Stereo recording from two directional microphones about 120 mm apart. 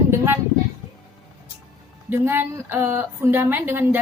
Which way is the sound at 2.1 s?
20° right (ahead or behind).